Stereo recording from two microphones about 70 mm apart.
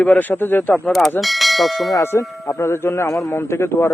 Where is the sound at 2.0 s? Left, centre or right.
Left.